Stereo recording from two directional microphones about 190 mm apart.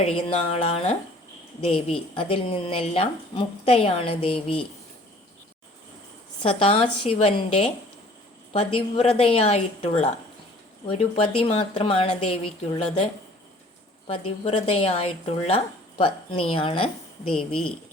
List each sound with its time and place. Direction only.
0.2 s speech: 30° left (ahead or behind)
6.4 s speech: 30° left (ahead or behind)
14.1 s speech: 30° left (ahead or behind)